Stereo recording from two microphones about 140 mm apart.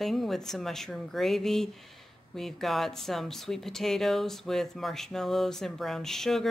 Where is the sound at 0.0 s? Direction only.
Centre (ahead or behind).